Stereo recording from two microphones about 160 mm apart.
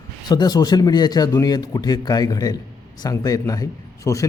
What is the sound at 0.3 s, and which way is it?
Speech, 25° left (ahead or behind).